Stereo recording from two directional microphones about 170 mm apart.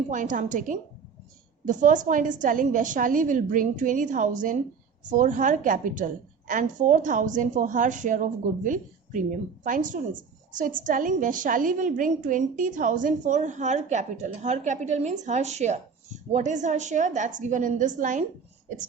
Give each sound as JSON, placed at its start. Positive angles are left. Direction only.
{"t": 0.1, "sound": "a woman's voice", "side_deg": -50}